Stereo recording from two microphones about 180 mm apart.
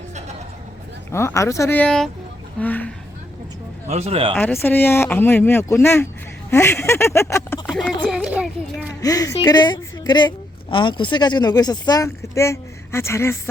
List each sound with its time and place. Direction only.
1.1 s speech: 15° left (ahead or behind)
3.8 s speech: 35° right (ahead or behind)
4.6 s speech: 10° left (ahead or behind)
8.0 s speech: 5° right (ahead or behind)
8.9 s a woman's voice: 20° left (ahead or behind)